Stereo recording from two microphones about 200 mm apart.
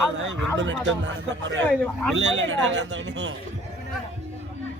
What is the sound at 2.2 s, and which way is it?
A man's voice, 65° right (ahead or behind).